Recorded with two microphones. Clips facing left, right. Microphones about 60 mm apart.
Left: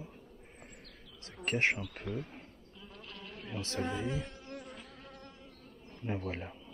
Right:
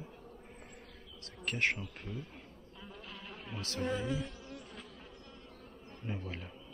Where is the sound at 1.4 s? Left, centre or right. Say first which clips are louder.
Left 3 dB; left.